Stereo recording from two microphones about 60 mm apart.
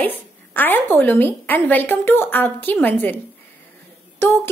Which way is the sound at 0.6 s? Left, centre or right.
Left.